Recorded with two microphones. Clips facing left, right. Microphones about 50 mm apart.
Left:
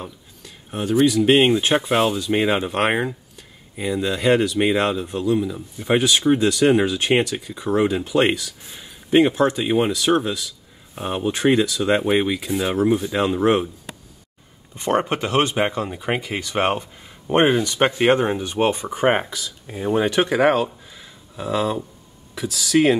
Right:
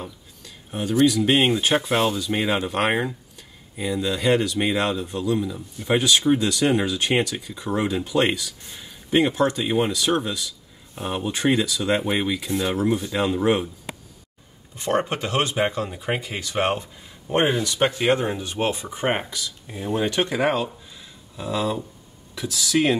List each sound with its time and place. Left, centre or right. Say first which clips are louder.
0.0 s a sound: left 1 dB; centre
1.2 s speech: left 4 dB; centre
14.8 s speech: left 3 dB; left
17.3 s speech: left 4 dB; left
20.5 s a sound: left 4 dB; centre
22.5 s speech: left 4 dB; centre